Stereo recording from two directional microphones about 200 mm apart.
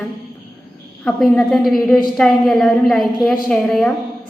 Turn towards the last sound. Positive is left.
turn(degrees=5)  # may be behind; listen again after turning